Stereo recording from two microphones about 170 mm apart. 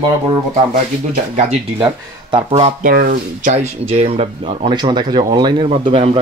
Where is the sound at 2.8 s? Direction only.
55° right (ahead or behind); by 6.1 s 35° right (ahead or behind).